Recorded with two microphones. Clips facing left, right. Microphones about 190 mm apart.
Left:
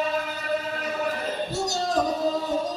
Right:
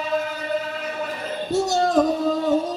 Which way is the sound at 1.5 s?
55° right (ahead or behind).